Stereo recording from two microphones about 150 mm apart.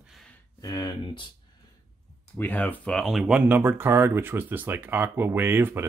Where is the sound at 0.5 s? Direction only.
25° left (ahead or behind).